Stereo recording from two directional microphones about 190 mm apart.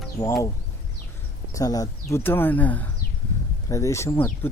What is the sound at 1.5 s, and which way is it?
Speech, 20° left (ahead or behind).